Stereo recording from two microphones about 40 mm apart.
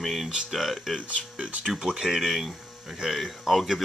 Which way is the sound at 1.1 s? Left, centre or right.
Right.